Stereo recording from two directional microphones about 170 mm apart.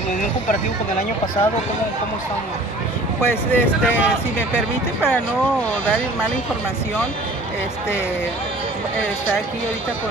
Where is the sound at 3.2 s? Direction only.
10° left (ahead or behind).